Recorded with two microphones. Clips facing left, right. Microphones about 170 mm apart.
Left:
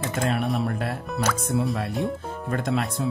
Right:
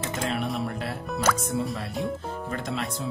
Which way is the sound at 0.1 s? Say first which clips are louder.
Left 4 dB; 55° left (ahead or behind).